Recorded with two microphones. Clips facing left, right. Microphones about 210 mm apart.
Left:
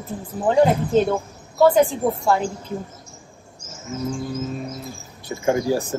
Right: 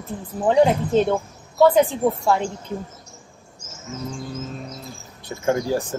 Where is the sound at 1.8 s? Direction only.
Centre (ahead or behind).